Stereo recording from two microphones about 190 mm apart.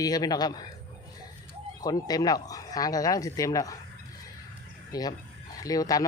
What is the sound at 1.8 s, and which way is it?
Speech, 20° left (ahead or behind).